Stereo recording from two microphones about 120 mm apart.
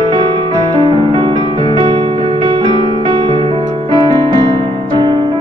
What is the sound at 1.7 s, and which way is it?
Music, 40° right (ahead or behind).